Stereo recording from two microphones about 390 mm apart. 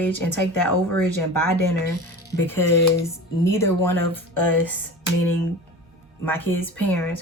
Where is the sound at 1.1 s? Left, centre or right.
Left.